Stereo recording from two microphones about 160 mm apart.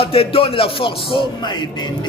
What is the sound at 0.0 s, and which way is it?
A man's voice, 35° left (ahead or behind).